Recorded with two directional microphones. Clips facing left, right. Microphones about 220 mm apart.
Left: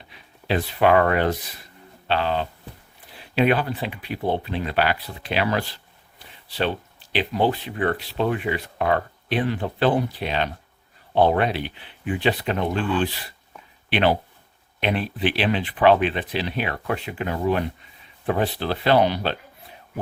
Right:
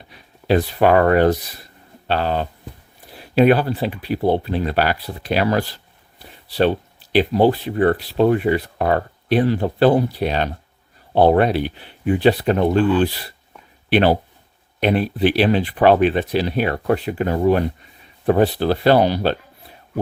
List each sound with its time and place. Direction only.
0.1 s speech: 40° right (ahead or behind)